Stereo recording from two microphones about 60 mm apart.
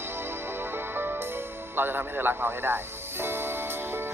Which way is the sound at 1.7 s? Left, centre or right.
Right.